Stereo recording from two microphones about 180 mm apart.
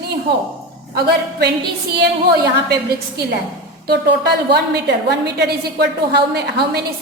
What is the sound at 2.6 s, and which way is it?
A woman's voice, 65° right (ahead or behind).